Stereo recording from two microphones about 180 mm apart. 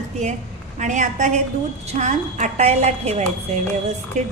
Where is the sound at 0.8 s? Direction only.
40° right (ahead or behind).